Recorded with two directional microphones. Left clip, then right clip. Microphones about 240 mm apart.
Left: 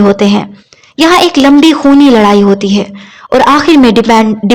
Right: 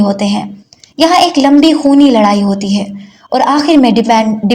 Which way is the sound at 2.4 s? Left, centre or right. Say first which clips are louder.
Left 8 dB; left.